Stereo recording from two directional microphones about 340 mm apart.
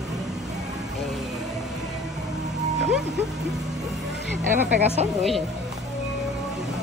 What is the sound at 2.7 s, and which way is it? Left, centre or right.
Speech, centre.